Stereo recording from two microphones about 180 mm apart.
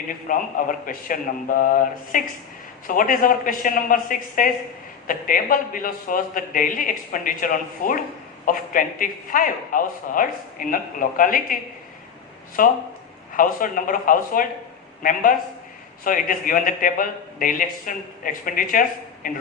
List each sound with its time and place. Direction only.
0.1 s a man's voice: 50° left (ahead or behind)